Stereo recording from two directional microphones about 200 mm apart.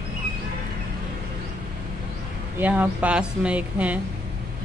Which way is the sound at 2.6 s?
10° right (ahead or behind).